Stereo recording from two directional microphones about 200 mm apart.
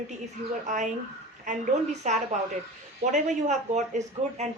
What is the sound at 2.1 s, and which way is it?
Speech, 35° right (ahead or behind).